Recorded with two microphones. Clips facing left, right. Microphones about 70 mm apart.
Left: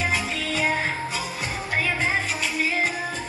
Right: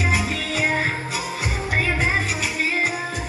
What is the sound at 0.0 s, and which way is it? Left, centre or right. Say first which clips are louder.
Music: right 2 dB; centre.